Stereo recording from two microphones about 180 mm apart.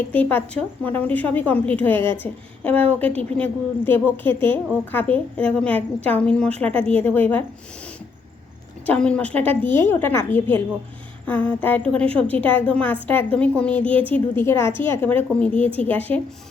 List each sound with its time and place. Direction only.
0.1 s a woman's voice: 10° left (ahead or behind)
8.9 s a woman's voice: 5° left (ahead or behind)